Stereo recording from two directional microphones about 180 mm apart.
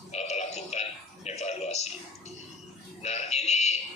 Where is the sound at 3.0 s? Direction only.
40° left (ahead or behind).